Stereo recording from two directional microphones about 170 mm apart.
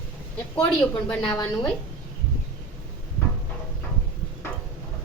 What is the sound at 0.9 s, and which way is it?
Speech, 10° left (ahead or behind).